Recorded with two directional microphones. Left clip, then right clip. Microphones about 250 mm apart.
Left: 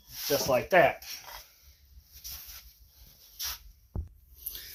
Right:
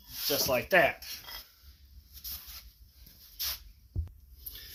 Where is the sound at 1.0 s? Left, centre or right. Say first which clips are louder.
Even; centre.